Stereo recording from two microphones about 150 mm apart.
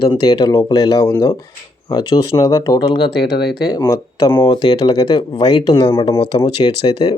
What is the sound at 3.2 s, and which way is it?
Speech, 90° left.